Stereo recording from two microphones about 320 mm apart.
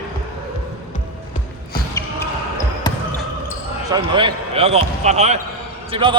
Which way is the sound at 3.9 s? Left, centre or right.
Centre.